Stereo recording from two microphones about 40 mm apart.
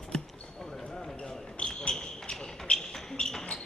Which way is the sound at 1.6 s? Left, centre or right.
Left.